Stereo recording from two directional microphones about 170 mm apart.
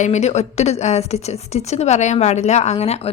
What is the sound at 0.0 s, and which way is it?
A woman's voice, 40° left (ahead or behind).